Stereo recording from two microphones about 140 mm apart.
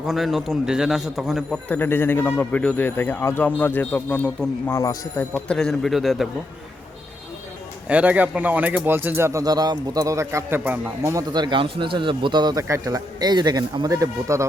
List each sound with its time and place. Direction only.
0.1 s a man's voice: centre (ahead or behind)
1.6 s speech: 15° left (ahead or behind)
4.8 s speech: 25° left (ahead or behind)
5.3 s a man's voice: 5° left (ahead or behind)
7.9 s speech: 10° right (ahead or behind)